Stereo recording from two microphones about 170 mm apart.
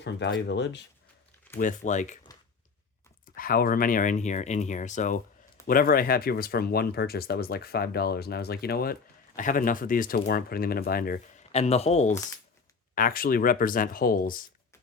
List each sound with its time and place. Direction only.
0.0 s speech: 90° left
1.5 s speech: 50° left (ahead or behind)
3.3 s speech: 60° left (ahead or behind)
11.5 s speech: 40° left (ahead or behind)
12.9 s speech: 55° left (ahead or behind)